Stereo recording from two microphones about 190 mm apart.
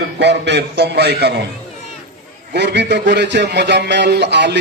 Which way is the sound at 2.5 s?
60° right (ahead or behind).